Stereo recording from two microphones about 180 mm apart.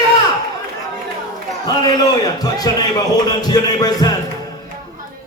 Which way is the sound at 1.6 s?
20° left (ahead or behind).